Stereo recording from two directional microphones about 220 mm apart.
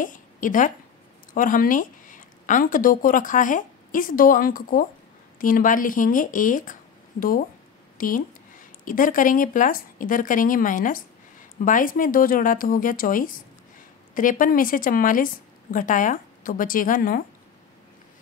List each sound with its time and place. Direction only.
0.0 s a woman's voice: 35° left (ahead or behind)